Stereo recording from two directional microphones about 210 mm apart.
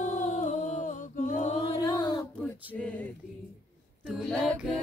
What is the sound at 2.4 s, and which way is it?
Male singing, 5° left (ahead or behind).